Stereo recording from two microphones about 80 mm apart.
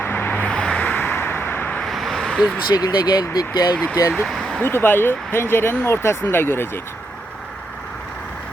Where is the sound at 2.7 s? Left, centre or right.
Left.